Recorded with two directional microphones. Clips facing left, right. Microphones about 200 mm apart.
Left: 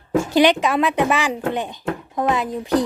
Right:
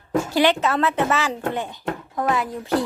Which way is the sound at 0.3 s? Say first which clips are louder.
Left 4 dB; 20° left (ahead or behind).